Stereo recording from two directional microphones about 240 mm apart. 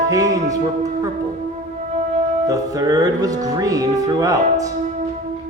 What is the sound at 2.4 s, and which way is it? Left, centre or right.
Speech, centre.